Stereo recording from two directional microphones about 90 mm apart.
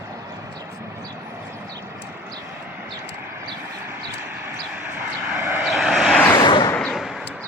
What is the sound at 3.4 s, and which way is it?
Vehicle, 25° right (ahead or behind).